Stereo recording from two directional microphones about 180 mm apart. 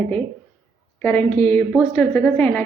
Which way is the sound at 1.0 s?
10° left (ahead or behind).